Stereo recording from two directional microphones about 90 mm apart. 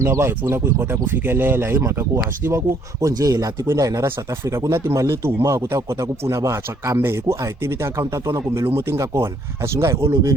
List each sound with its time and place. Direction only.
0.0 s speech: 30° right (ahead or behind)
3.0 s speech: 40° right (ahead or behind)